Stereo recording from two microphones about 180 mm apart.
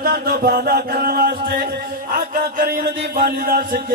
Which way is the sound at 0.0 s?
60° right (ahead or behind).